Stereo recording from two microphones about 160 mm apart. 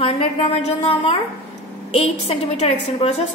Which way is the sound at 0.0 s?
40° left (ahead or behind).